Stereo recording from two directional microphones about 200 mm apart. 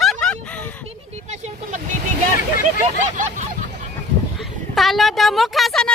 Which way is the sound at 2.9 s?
40° right (ahead or behind).